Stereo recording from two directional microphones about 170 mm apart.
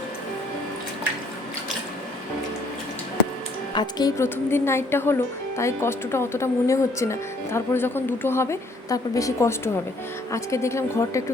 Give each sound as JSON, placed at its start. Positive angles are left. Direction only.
{"t": 3.8, "sound": "speech", "side_deg": 25}